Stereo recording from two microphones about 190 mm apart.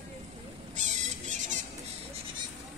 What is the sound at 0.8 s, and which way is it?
Rodents, 40° right (ahead or behind).